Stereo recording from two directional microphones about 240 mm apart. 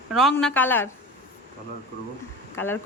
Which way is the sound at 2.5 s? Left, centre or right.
Centre.